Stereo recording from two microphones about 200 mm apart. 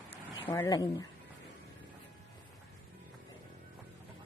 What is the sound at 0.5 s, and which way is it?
Speech, 15° left (ahead or behind).